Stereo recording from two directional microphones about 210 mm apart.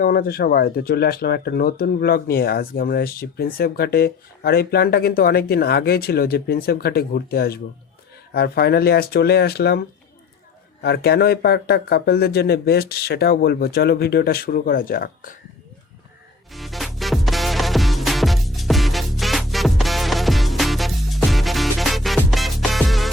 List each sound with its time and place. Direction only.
0.0 s speech: 45° left (ahead or behind)
10.8 s speech: 50° left (ahead or behind)
16.5 s music: centre (ahead or behind)